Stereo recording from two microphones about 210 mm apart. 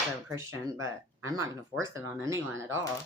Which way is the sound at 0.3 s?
15° right (ahead or behind).